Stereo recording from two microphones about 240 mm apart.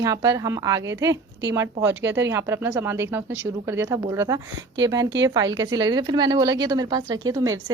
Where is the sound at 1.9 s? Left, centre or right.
Right.